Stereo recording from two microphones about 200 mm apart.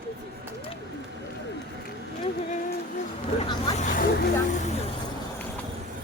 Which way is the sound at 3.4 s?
25° left (ahead or behind).